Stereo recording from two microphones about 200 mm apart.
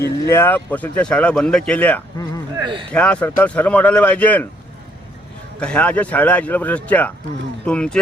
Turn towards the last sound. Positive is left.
turn(degrees=5)  # may be behind; listen again after turning